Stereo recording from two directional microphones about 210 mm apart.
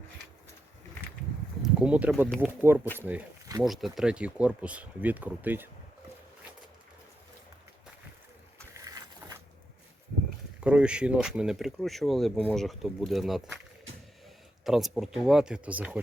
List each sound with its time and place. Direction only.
1.6 s speech: 5° right (ahead or behind)
8.7 s a sound: 15° right (ahead or behind)
10.6 s speech: 5° right (ahead or behind)
14.6 s speech: centre (ahead or behind)